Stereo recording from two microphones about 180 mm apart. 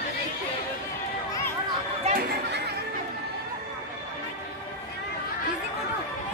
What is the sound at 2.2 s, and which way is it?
Speech, 65° right (ahead or behind).